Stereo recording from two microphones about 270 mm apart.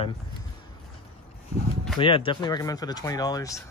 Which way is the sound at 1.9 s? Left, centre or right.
Centre.